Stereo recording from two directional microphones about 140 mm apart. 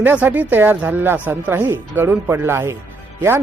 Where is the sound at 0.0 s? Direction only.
15° right (ahead or behind).